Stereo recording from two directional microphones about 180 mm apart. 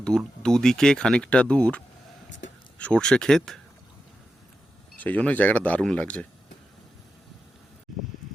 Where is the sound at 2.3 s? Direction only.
90° left.